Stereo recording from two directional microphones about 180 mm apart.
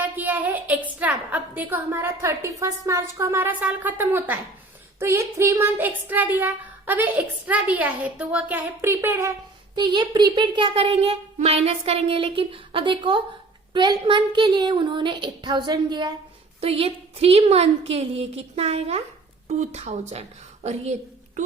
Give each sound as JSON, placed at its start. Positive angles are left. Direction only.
{"t": 0.0, "sound": "a sound", "side_deg": -10}
{"t": 1.3, "sound": "speech", "side_deg": -10}
{"t": 9.7, "sound": "a woman's voice", "side_deg": -25}